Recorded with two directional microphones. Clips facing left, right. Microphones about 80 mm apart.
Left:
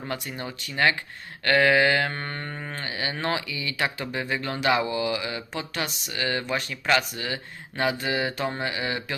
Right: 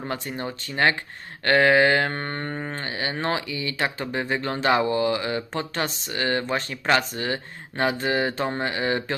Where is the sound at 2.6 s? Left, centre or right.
Right.